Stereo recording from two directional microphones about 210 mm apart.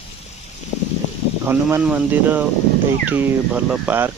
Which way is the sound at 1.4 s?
10° right (ahead or behind).